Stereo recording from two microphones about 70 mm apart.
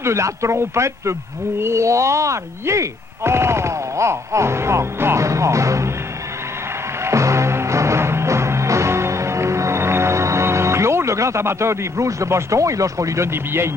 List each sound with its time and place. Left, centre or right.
0.0 s speech: right
7.1 s music: right